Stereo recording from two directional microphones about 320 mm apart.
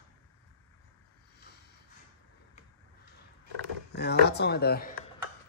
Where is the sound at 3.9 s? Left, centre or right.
Left.